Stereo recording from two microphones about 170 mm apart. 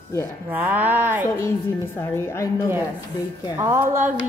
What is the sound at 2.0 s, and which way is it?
Speech, 15° left (ahead or behind).